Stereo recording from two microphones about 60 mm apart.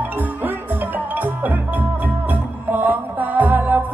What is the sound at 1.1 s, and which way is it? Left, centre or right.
Music, right.